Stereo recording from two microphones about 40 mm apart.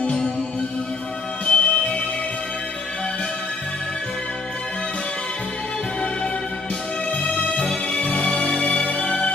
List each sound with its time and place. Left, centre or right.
1.4 s music: left
7.1 s music: left